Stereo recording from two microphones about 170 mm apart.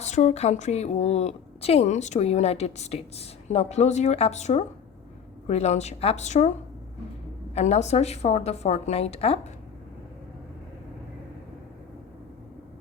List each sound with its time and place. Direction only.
0.0 s a woman's voice: 45° left (ahead or behind)
7.5 s a woman's voice: 40° left (ahead or behind)